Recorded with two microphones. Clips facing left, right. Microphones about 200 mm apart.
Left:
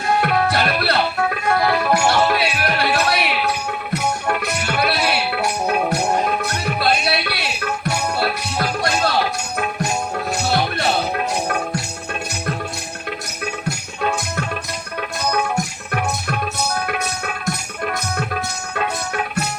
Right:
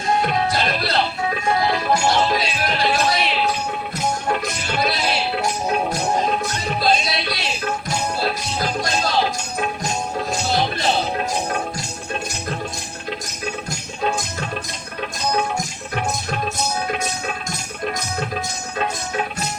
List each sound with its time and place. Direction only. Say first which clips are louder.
0.0 s music: left 2 dB; 65° left (ahead or behind)
10.3 s music: left 2 dB; 65° left (ahead or behind)
13.7 s music: left 2 dB; 65° left (ahead or behind)